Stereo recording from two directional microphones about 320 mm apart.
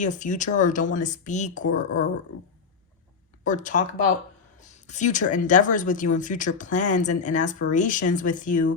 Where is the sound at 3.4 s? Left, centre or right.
Left.